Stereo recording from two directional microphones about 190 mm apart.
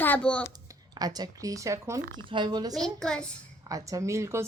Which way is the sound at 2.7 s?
5° left (ahead or behind).